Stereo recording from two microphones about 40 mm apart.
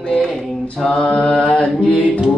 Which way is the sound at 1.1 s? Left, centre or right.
Left.